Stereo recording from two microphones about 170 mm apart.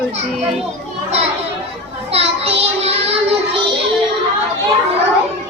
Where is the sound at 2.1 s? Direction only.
35° right (ahead or behind).